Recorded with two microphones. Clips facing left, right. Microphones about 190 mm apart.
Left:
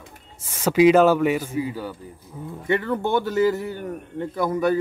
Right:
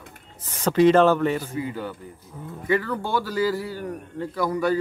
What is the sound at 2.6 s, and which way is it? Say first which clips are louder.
A man's voice: left 2 dB; 25° left (ahead or behind).